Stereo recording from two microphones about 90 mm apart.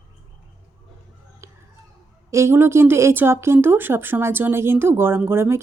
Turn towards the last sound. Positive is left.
turn(degrees=-30)  # may be behind; listen again after turning